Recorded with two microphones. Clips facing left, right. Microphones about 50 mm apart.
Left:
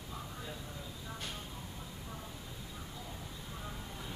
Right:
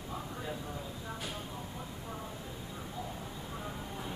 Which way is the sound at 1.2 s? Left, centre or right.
Centre.